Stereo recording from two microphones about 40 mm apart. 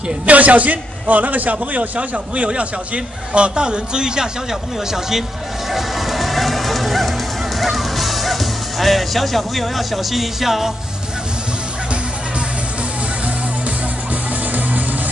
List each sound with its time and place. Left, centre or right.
0.3 s a man's voice: right; by 5.2 s centre
5.7 s music: centre